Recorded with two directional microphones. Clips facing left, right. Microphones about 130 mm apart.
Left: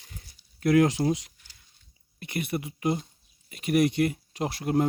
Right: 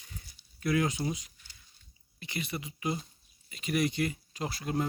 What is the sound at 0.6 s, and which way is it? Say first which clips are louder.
Speech: left 8 dB; 60° left (ahead or behind).